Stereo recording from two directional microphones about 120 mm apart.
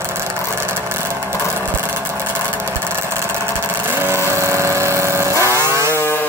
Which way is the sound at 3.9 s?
20° right (ahead or behind).